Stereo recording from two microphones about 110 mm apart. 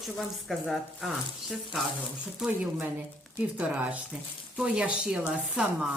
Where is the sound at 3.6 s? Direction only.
10° right (ahead or behind).